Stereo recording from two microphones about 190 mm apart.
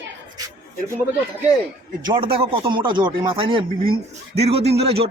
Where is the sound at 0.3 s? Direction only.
20° right (ahead or behind).